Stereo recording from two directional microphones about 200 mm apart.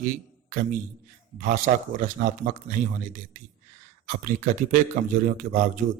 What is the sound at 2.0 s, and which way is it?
Speech, 40° right (ahead or behind).